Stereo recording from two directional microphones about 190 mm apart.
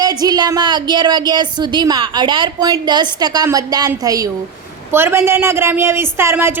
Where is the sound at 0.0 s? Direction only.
20° right (ahead or behind).